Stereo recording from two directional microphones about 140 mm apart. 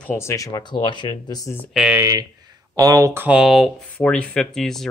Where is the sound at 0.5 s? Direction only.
30° left (ahead or behind).